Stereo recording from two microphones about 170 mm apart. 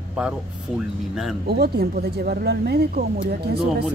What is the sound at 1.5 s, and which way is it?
Speech, 65° right (ahead or behind).